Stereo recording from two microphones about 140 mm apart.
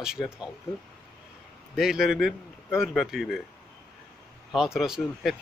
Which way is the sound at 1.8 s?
5° right (ahead or behind).